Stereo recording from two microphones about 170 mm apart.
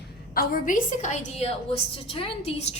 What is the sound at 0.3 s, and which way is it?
A woman's voice, 50° left (ahead or behind).